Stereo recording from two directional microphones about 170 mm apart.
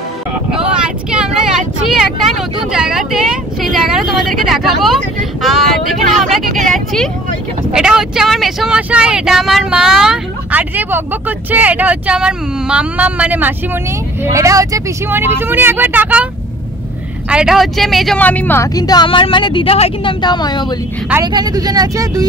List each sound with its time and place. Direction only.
0.5 s vehicle: 5° right (ahead or behind)
1.9 s speech: centre (ahead or behind)
17.3 s a woman's voice: 5° right (ahead or behind); by 20.6 s 25° left (ahead or behind)
21.2 s speech: 25° right (ahead or behind)